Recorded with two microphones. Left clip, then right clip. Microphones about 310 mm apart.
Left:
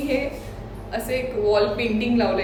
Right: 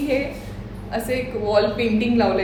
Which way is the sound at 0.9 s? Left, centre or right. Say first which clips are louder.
Even; centre.